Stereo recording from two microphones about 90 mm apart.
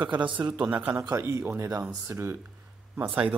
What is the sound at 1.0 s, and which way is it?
A man's voice, 35° right (ahead or behind).